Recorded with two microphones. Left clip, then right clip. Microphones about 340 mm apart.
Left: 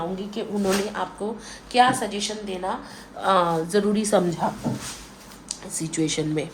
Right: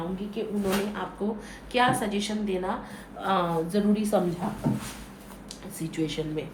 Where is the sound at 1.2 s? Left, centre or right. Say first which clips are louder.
Left 2 dB; centre.